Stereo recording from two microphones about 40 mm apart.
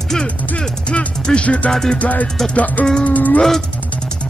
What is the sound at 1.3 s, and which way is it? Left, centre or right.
Music, left.